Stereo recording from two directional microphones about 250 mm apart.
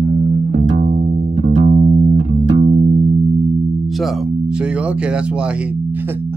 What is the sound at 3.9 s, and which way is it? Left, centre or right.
Music, centre.